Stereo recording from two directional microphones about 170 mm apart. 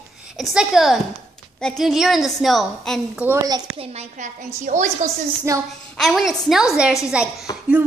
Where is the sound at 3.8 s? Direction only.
40° right (ahead or behind).